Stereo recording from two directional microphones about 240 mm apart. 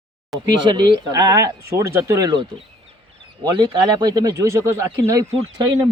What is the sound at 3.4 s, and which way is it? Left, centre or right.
Speech, centre.